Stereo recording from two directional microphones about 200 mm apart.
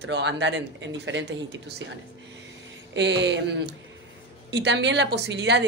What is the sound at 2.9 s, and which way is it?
A woman's voice, 60° right (ahead or behind).